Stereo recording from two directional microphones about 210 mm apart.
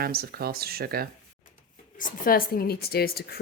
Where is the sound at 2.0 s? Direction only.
45° left (ahead or behind).